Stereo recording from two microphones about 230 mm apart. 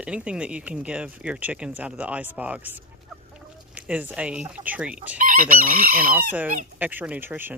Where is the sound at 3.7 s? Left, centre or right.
Centre.